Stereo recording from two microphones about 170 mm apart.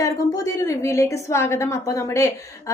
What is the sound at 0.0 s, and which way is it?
A woman's voice, 20° left (ahead or behind).